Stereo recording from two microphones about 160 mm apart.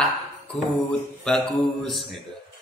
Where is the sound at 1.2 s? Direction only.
5° left (ahead or behind).